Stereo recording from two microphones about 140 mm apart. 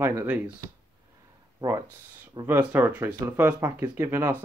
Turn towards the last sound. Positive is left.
turn(degrees=-15)  # may be behind; listen again after turning